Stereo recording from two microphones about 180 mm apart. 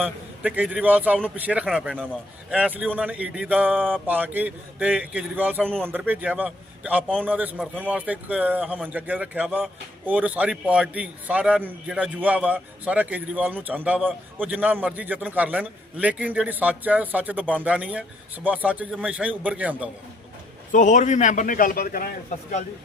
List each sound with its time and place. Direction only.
0.0 s a man's voice: 10° right (ahead or behind)
14.0 s a man's voice: 5° left (ahead or behind)
14.4 s a man's voice: 10° right (ahead or behind)
20.7 s a man's voice: 45° left (ahead or behind)